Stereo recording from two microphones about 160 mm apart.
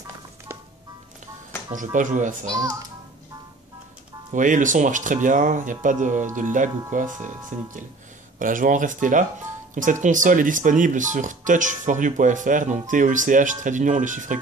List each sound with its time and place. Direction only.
1.8 s speech: 50° right (ahead or behind)
2.4 s a child's voice: 20° right (ahead or behind)
4.3 s speech: 55° right (ahead or behind)